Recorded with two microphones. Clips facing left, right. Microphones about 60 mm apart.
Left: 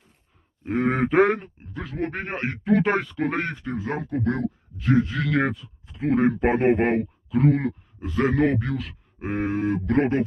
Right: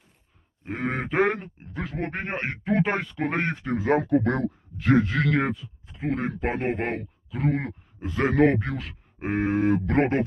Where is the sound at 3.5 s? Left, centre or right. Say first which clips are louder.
Right 5 dB; right.